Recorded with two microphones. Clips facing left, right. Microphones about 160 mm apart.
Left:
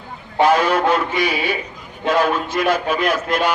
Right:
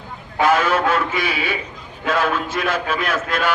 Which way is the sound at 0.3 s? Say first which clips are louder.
Left 2 dB; 35° left (ahead or behind).